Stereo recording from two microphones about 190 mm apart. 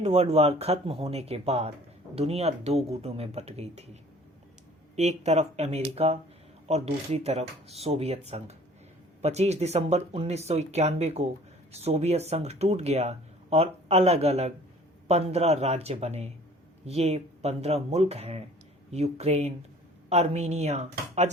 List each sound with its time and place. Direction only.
0.0 s speech: 35° right (ahead or behind)
4.9 s speech: 35° right (ahead or behind)